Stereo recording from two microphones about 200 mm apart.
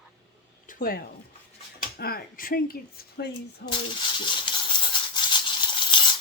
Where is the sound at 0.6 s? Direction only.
45° left (ahead or behind).